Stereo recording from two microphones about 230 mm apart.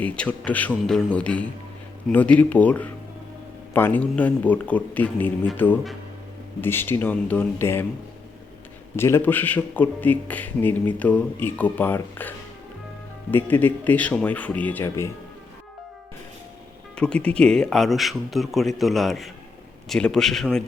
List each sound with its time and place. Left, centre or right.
0.0 s a man's voice: centre
9.0 s a man's voice: centre
13.3 s a man's voice: centre
16.9 s speech: centre